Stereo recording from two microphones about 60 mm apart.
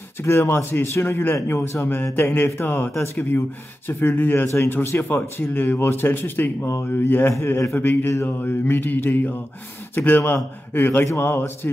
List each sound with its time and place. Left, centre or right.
0.2 s speech: left